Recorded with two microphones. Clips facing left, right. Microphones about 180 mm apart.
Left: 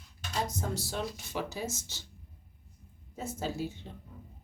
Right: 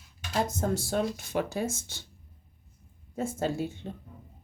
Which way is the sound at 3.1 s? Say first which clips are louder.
Right 6 dB; 50° right (ahead or behind).